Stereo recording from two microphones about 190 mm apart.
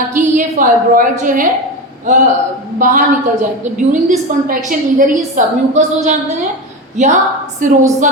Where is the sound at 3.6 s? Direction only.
40° right (ahead or behind).